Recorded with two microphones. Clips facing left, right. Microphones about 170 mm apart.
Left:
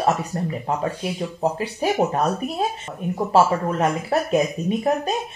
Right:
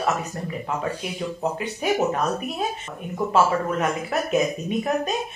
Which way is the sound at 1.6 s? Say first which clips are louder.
Even; 35° left (ahead or behind).